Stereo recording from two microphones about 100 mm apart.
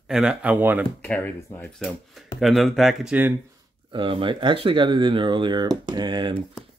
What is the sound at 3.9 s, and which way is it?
Speech, 60° right (ahead or behind).